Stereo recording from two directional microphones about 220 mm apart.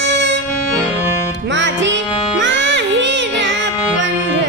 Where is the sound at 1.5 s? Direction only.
55° right (ahead or behind).